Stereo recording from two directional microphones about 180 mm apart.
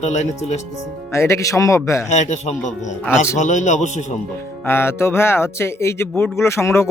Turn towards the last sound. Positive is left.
turn(degrees=15)  # may be behind; listen again after turning